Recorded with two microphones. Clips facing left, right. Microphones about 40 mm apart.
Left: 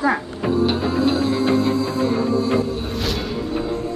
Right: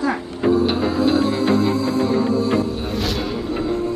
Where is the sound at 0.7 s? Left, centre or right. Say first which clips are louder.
Right 1 dB; centre.